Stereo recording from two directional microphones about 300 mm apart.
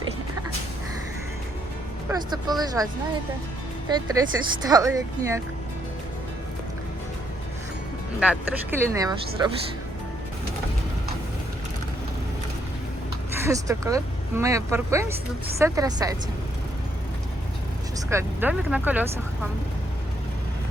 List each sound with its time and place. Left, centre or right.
2.0 s speech: centre
3.8 s speech: centre
8.2 s speech: centre
13.4 s speech: centre
18.1 s speech: centre